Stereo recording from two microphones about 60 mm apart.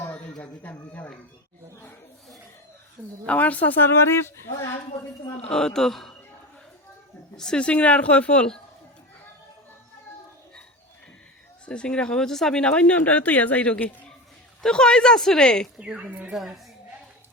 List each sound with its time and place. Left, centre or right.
0.1 s speech: centre
3.2 s speech: left
3.9 s speech: left
5.5 s speech: centre
7.3 s speech: centre
11.6 s speech: centre
14.6 s speech: centre
15.8 s speech: centre